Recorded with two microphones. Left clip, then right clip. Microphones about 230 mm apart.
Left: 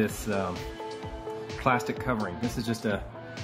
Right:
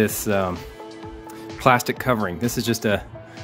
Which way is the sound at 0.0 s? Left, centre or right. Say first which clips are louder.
Right 8 dB; right.